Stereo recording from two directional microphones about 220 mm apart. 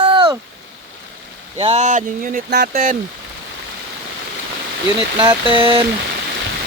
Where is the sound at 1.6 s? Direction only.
30° right (ahead or behind).